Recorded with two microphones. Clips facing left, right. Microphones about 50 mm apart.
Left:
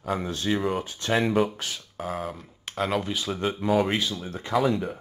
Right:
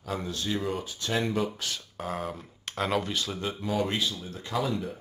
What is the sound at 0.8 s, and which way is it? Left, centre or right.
Speech, left.